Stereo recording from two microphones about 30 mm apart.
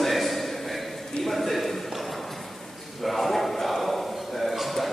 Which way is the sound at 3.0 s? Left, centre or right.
Centre.